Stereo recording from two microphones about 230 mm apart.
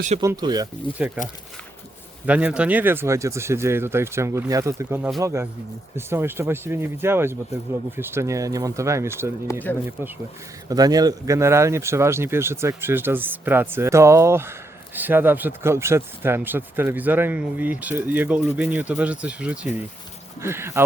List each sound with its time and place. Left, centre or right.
0.2 s speech: centre
2.2 s speech: centre
9.7 s speech: centre
10.7 s speech: centre